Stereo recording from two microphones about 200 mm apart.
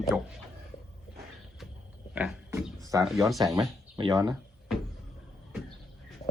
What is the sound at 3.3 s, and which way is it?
Speech, 20° right (ahead or behind).